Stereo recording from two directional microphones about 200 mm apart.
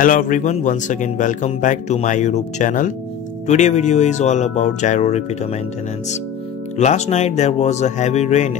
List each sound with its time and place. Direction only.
0.0 s speech: 40° left (ahead or behind)
6.8 s speech: 35° left (ahead or behind)